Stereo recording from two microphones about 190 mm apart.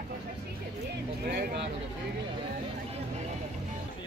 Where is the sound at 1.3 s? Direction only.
60° right (ahead or behind).